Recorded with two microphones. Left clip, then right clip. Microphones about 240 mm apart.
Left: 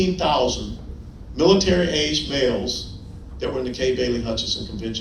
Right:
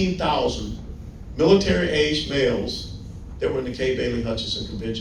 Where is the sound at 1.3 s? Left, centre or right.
Left.